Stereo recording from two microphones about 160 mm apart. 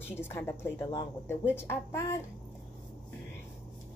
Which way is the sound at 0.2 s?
15° left (ahead or behind).